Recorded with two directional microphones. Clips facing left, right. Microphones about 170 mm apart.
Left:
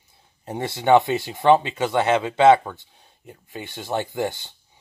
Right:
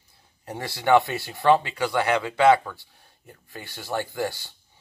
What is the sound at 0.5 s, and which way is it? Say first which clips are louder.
Speech: left 3 dB; 20° left (ahead or behind).